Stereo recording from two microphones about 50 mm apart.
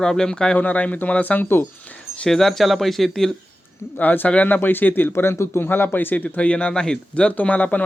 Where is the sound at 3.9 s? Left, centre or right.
Left.